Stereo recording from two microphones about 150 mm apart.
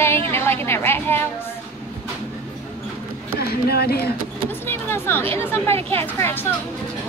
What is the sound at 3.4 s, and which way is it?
Speech, 90° left.